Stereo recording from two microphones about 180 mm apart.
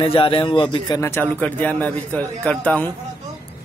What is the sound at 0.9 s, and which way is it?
Speech, 10° left (ahead or behind).